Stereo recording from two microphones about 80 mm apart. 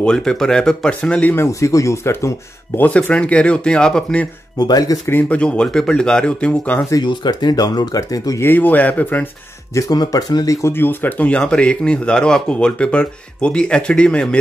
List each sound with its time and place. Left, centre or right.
0.0 s speech: centre
1.3 s speech: left
2.9 s speech: centre
4.6 s speech: left
5.3 s speech: centre
7.0 s speech: left
8.4 s speech: left
9.8 s speech: left
10.7 s speech: left